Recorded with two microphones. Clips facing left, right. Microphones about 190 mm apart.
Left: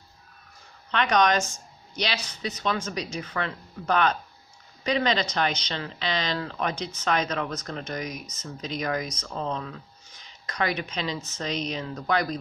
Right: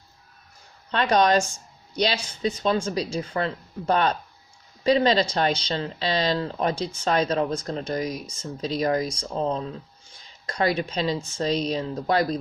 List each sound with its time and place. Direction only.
0.9 s speech: 30° right (ahead or behind)